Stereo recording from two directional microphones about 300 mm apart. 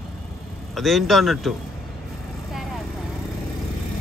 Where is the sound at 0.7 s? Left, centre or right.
Centre.